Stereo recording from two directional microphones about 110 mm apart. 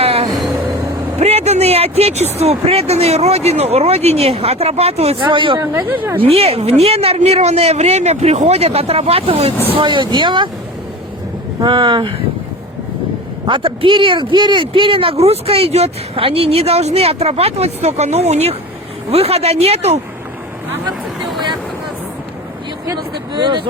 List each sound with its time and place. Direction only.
0.0 s music: 60° right (ahead or behind)
1.2 s speech: 75° right (ahead or behind)
5.2 s speech: 50° right (ahead or behind)
5.5 s speech: 20° right (ahead or behind)
6.2 s speech: 65° right (ahead or behind)
9.7 s speech: 45° right (ahead or behind)
11.6 s speech: 50° right (ahead or behind)
13.4 s speech: 50° right (ahead or behind); by 20.0 s 75° right (ahead or behind)
23.3 s speech: 45° right (ahead or behind)